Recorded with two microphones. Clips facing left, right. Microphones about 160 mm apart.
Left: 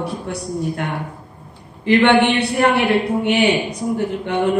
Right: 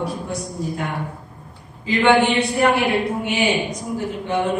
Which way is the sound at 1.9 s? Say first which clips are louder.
Left 3 dB; 65° left (ahead or behind).